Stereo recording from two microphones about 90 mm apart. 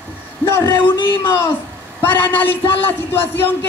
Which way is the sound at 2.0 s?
25° left (ahead or behind).